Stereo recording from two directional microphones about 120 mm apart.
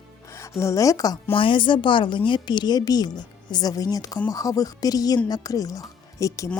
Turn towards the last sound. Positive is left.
turn(degrees=25)  # may be behind; listen again after turning